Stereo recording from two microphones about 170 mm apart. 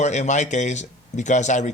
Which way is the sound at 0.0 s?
40° left (ahead or behind).